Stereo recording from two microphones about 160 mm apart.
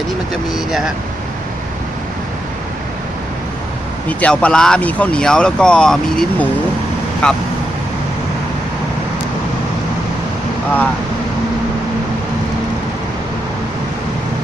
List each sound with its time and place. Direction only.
0.5 s speech: centre (ahead or behind)
4.2 s speech: 5° left (ahead or behind)